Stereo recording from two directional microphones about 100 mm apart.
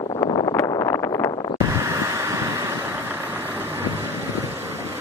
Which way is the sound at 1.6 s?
30° right (ahead or behind).